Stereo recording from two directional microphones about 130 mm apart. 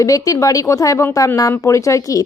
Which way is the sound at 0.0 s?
25° left (ahead or behind).